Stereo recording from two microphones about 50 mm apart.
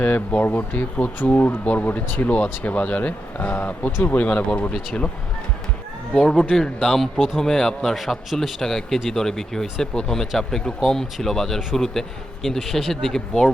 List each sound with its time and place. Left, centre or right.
0.3 s speech: left
6.1 s a man's voice: centre